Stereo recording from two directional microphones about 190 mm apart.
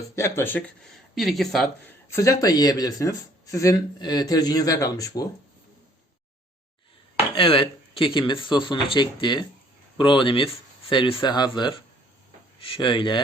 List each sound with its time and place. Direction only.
0.2 s speech: 10° left (ahead or behind)
1.1 s speech: centre (ahead or behind)
2.0 s speech: 15° left (ahead or behind)
7.3 s speech: 25° left (ahead or behind)